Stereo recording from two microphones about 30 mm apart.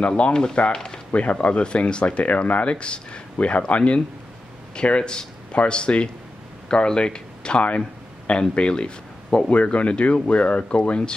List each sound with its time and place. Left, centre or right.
0.2 s speech: left
0.7 s a sound: left
1.1 s speech: left
1.6 s speech: left
9.5 s speech: left